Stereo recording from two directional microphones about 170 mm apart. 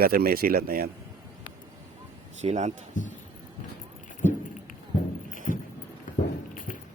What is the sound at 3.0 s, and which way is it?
Speech, 50° left (ahead or behind).